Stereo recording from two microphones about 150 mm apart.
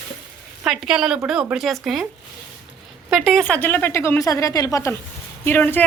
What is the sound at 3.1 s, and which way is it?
Speech, centre (ahead or behind).